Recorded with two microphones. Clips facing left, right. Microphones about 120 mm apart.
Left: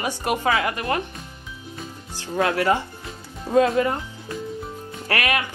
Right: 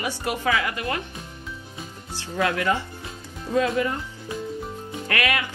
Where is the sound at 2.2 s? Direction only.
40° left (ahead or behind).